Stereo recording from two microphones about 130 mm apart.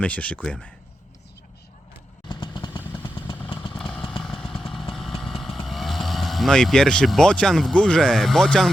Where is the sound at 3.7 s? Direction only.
5° left (ahead or behind).